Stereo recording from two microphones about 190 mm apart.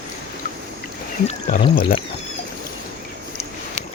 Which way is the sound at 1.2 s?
45° left (ahead or behind).